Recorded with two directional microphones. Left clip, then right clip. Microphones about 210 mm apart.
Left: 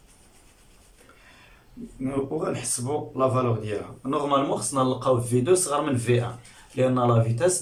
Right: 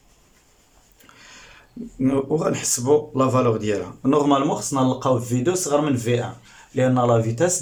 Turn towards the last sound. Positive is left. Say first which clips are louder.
# right 3 dB
turn(degrees=-30)  # may be behind; listen again after turning